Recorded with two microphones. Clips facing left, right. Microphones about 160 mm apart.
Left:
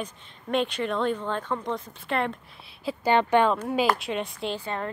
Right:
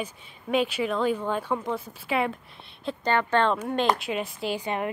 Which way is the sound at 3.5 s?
Centre (ahead or behind).